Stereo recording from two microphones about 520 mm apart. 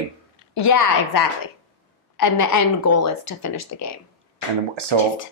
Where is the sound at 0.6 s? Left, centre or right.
Left.